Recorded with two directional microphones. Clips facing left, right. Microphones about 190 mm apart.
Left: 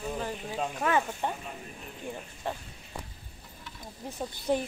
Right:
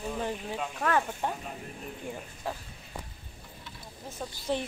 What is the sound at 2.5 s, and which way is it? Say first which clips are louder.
Speech: left 1 dB; 5° right (ahead or behind).